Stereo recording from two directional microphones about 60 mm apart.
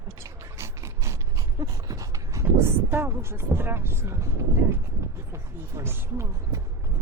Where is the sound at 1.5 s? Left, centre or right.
Right.